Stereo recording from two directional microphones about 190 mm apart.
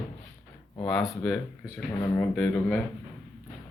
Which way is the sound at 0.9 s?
Centre (ahead or behind).